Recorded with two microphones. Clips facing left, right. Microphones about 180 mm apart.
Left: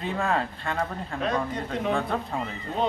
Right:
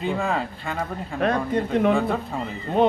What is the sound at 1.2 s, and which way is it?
Speech, 60° right (ahead or behind).